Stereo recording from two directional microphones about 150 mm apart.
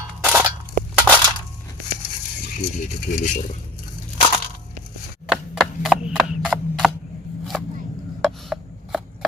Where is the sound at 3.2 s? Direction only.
60° left (ahead or behind).